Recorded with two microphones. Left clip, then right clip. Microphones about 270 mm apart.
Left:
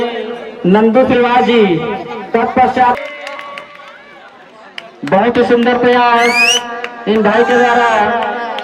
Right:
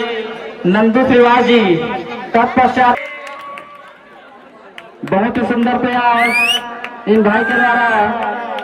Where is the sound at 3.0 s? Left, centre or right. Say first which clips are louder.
Left 2 dB; left.